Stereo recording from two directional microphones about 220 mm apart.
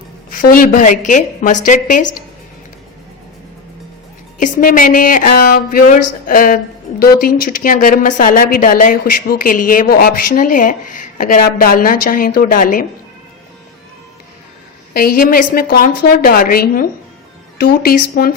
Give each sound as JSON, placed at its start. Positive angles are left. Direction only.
{"t": 0.3, "sound": "a woman's voice", "side_deg": 40}
{"t": 4.4, "sound": "a woman's voice", "side_deg": 35}
{"t": 14.9, "sound": "a woman's voice", "side_deg": 40}